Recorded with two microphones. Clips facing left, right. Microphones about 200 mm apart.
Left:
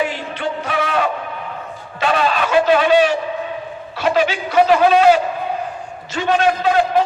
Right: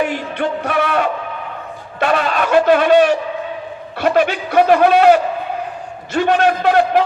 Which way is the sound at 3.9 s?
60° right (ahead or behind).